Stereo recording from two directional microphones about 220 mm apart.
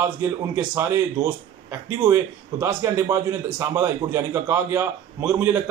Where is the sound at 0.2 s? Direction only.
10° right (ahead or behind).